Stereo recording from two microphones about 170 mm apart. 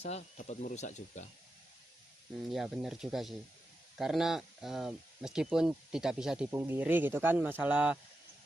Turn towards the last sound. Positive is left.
turn(degrees=-10)  # may be behind; listen again after turning